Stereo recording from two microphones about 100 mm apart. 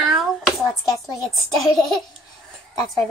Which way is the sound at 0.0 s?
5° right (ahead or behind).